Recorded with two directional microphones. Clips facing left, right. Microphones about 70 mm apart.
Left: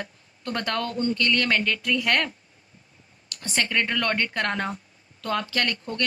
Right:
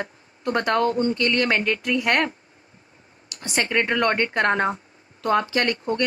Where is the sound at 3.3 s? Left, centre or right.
Right.